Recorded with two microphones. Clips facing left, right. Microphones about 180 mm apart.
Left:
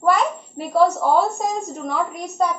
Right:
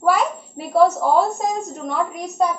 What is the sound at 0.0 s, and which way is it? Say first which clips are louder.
A woman's voice: even; 5° right (ahead or behind).